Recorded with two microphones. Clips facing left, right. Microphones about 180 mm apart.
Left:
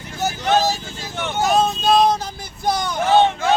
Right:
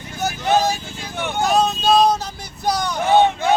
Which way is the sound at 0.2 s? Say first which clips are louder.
Even; 15° right (ahead or behind).